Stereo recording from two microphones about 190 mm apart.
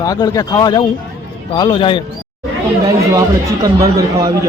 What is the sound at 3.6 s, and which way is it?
Speech, 20° right (ahead or behind).